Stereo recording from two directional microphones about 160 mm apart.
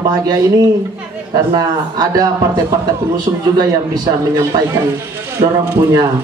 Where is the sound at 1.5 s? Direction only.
25° right (ahead or behind).